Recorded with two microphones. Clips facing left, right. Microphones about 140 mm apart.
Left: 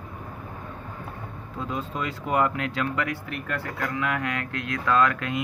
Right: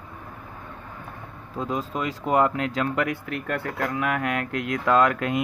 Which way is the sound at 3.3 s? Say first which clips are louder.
Right 3 dB; 50° right (ahead or behind).